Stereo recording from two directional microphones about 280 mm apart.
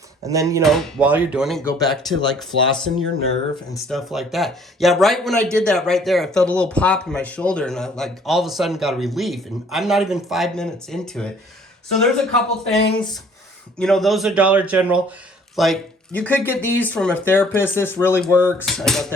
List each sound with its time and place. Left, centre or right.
0.3 s speech: centre
0.6 s speech: centre
12.8 s speech: centre
13.7 s speech: centre